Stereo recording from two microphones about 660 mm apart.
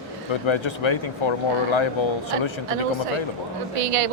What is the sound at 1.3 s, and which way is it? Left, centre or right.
Speech, left.